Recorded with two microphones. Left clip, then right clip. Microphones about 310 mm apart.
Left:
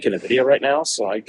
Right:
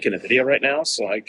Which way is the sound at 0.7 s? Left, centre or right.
Centre.